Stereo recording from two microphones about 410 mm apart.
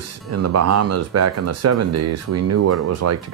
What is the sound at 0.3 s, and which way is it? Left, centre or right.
Speech, right.